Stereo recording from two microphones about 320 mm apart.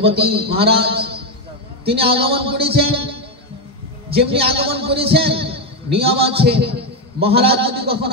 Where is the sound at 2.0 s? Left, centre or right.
Centre.